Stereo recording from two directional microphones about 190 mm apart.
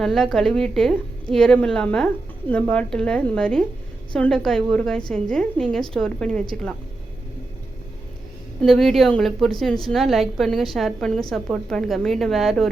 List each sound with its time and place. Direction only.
0.0 s a woman's voice: centre (ahead or behind)
8.6 s a woman's voice: centre (ahead or behind)